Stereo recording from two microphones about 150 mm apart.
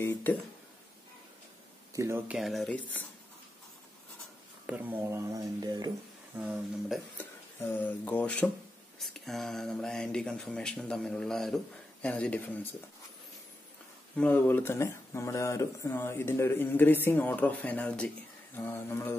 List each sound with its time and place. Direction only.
0.0 s speech: 15° left (ahead or behind)
2.0 s speech: 15° right (ahead or behind)
2.3 s speech: centre (ahead or behind)
4.6 s speech: 10° right (ahead or behind); by 5.9 s 25° right (ahead or behind)
6.3 s speech: 10° right (ahead or behind)
7.2 s speech: 10° left (ahead or behind)
14.1 s speech: 10° left (ahead or behind)